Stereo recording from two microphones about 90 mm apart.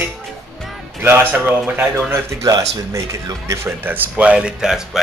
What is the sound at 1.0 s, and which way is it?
Speech, 25° right (ahead or behind).